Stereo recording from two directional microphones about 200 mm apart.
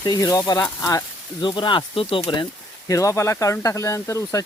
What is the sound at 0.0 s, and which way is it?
Speech, 20° left (ahead or behind).